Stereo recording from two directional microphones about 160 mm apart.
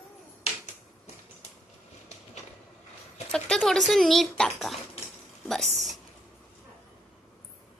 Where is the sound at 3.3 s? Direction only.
5° left (ahead or behind).